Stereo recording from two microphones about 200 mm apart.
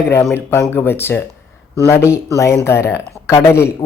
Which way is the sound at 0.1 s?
10° left (ahead or behind).